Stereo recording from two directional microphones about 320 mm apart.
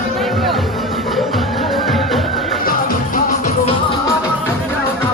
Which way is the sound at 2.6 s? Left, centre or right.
Left.